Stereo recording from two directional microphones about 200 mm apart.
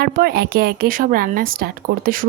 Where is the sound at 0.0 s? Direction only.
50° right (ahead or behind).